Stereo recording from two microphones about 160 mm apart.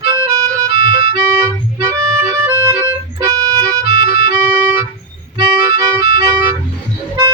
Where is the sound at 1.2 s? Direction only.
20° right (ahead or behind).